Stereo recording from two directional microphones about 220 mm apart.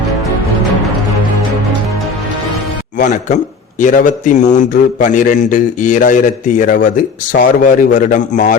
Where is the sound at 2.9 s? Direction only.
35° left (ahead or behind).